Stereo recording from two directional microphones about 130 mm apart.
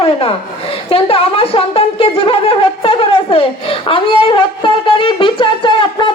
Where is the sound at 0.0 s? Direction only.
45° left (ahead or behind).